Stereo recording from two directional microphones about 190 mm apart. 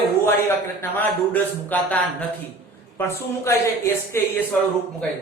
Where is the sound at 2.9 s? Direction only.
15° left (ahead or behind).